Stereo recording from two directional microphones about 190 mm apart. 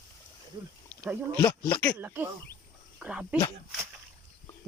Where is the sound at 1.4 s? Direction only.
10° left (ahead or behind).